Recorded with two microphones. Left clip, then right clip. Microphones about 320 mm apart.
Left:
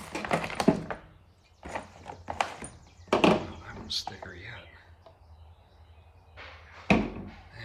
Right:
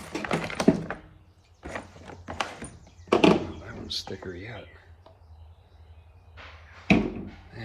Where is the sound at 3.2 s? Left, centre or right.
Centre.